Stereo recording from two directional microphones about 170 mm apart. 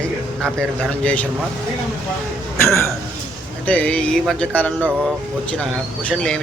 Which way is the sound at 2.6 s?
15° left (ahead or behind).